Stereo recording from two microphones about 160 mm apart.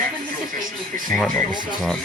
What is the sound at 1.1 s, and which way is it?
Speech, centre (ahead or behind).